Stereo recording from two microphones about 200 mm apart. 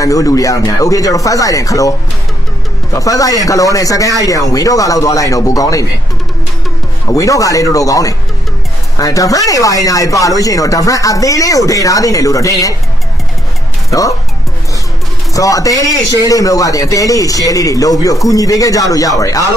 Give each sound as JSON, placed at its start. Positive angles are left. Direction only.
{"t": 0.0, "sound": "speech", "side_deg": 15}
{"t": 7.1, "sound": "speech", "side_deg": 15}
{"t": 13.8, "sound": "speech", "side_deg": 15}
{"t": 15.3, "sound": "speech", "side_deg": 15}